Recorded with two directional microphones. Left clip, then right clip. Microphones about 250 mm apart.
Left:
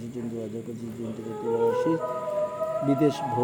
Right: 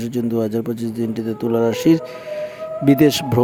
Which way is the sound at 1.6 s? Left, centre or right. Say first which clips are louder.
Right 7 dB; right.